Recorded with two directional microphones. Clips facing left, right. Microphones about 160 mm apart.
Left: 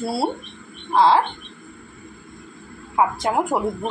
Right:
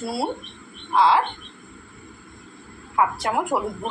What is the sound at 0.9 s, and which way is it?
Frog, 35° left (ahead or behind).